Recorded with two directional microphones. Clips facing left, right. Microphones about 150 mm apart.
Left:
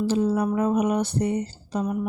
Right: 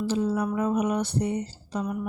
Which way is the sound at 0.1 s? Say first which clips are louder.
Left 2 dB; 45° left (ahead or behind).